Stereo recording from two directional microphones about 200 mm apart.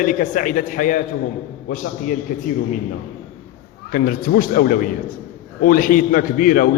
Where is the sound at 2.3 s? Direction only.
40° left (ahead or behind).